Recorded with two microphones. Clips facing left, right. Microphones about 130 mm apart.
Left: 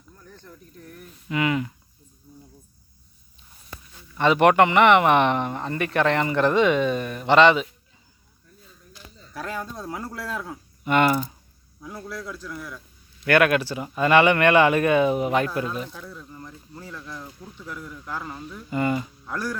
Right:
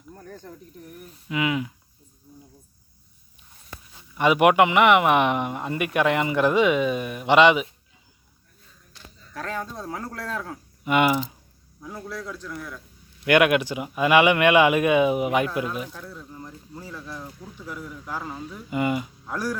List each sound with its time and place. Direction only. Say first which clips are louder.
0.1 s snake: right 7 dB; 55° right (ahead or behind)
0.7 s speech: right 1 dB; 15° right (ahead or behind)
1.3 s speech: left 1 dB; 5° right (ahead or behind)
4.1 s speech: even; 10° right (ahead or behind)
8.9 s speech: left 1 dB; 5° left (ahead or behind)
10.9 s speech: left 1 dB; 10° right (ahead or behind)
11.8 s speech: even; centre (ahead or behind)
13.2 s speech: right 1 dB; 15° right (ahead or behind)